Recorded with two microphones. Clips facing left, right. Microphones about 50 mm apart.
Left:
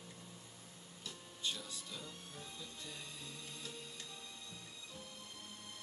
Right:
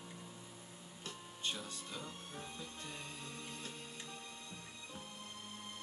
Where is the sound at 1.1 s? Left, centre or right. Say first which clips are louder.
Right 1 dB; right.